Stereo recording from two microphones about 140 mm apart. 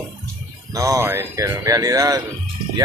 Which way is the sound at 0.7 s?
20° right (ahead or behind).